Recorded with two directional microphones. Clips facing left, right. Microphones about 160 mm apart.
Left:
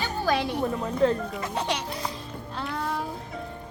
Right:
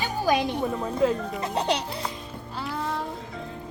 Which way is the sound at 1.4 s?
35° right (ahead or behind).